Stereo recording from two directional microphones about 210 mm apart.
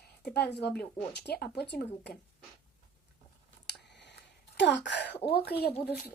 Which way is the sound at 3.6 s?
55° left (ahead or behind).